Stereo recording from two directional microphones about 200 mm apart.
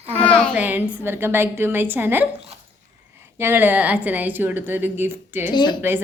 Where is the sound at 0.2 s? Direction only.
5° left (ahead or behind).